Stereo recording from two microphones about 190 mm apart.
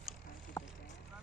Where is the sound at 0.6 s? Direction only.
15° left (ahead or behind).